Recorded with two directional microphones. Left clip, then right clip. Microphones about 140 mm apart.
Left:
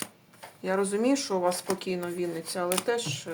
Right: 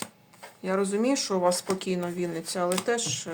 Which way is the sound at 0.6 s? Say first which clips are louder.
Even; centre (ahead or behind).